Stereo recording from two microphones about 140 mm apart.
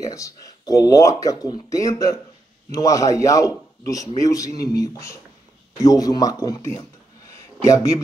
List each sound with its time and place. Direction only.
0.0 s speech: 25° left (ahead or behind)